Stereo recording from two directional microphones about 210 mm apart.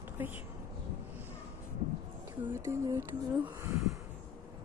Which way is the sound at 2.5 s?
10° right (ahead or behind).